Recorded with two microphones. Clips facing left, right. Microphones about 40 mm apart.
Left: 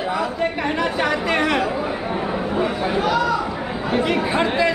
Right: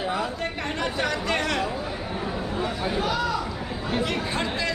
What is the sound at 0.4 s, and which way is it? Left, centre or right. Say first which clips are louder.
Chatter: left 7 dB; centre.